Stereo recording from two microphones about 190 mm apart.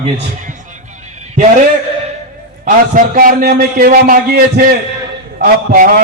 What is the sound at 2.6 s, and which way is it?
A man's voice, 45° right (ahead or behind).